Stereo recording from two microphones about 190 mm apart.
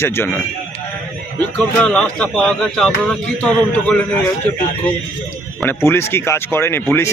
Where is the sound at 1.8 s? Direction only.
5° left (ahead or behind).